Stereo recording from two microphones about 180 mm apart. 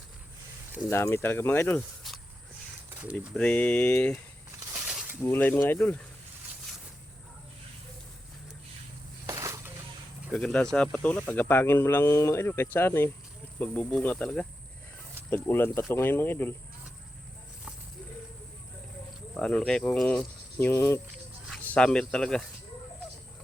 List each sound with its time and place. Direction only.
0.9 s speech: 15° left (ahead or behind)
3.3 s speech: 5° left (ahead or behind)
4.7 s a sound: 5° right (ahead or behind)
5.2 s speech: 10° left (ahead or behind)
9.2 s a sound: 15° right (ahead or behind)
10.3 s speech: 5° left (ahead or behind)
19.3 s cricket: 5° left (ahead or behind)
21.5 s speech: 5° left (ahead or behind)